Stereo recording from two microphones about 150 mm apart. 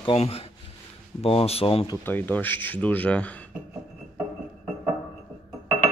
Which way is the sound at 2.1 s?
10° left (ahead or behind).